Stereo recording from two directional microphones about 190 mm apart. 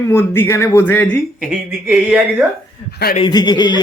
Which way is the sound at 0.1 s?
10° left (ahead or behind).